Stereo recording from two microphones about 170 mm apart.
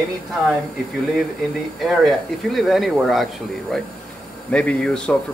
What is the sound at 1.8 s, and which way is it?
Speech, centre (ahead or behind).